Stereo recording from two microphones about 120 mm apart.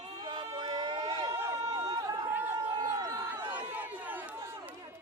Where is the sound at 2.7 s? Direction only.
30° right (ahead or behind).